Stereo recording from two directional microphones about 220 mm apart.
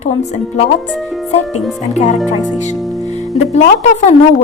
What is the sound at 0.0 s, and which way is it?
Speech, 30° left (ahead or behind).